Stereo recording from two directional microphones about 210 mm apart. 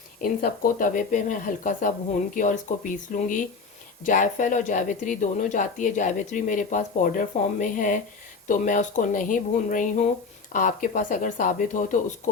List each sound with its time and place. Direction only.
0.2 s speech: 45° left (ahead or behind)